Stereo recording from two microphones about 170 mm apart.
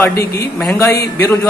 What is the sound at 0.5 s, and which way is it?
Speech, 10° left (ahead or behind).